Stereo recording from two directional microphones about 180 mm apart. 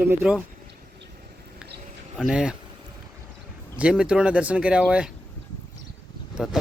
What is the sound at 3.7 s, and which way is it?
Speech, 5° right (ahead or behind).